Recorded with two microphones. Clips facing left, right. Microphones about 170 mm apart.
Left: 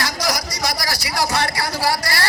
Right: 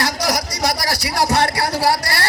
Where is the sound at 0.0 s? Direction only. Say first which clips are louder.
Right 3 dB; 65° right (ahead or behind).